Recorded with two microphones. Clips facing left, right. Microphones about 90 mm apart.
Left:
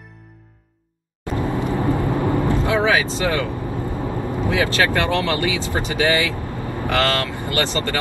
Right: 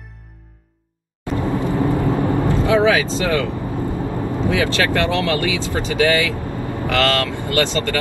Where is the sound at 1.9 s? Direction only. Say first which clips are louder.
Right 1 dB; 20° right (ahead or behind).